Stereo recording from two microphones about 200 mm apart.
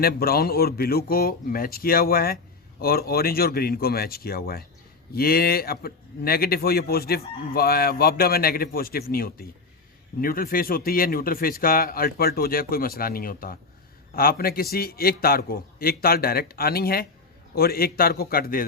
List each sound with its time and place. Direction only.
0.0 s speech: 50° left (ahead or behind)